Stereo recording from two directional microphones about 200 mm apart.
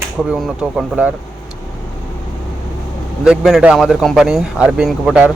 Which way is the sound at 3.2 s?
Centre (ahead or behind).